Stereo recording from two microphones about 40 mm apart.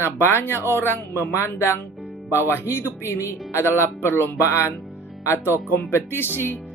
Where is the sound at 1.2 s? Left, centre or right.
Left.